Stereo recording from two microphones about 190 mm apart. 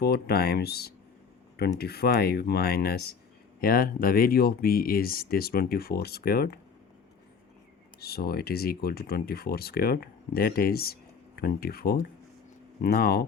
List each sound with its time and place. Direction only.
0.0 s speech: 55° left (ahead or behind)
8.0 s speech: 55° left (ahead or behind)